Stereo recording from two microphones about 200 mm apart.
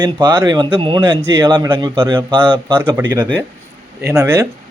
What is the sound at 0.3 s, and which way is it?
Speech, 15° right (ahead or behind).